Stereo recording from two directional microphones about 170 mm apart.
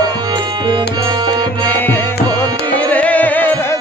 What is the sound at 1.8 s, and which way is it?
Tabla, 10° left (ahead or behind).